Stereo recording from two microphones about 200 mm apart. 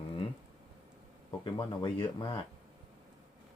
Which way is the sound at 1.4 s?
25° left (ahead or behind).